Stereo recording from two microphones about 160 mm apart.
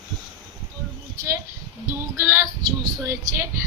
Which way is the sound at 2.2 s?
15° right (ahead or behind).